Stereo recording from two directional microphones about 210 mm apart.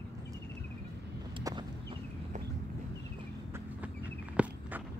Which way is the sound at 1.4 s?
20° right (ahead or behind).